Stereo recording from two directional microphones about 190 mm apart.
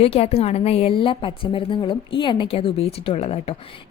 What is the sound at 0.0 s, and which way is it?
A woman's voice, 30° left (ahead or behind).